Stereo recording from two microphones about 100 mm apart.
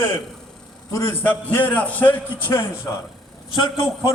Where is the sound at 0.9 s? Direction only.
25° left (ahead or behind).